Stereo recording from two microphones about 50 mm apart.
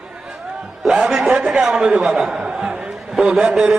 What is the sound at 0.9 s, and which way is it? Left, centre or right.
A man's voice, centre.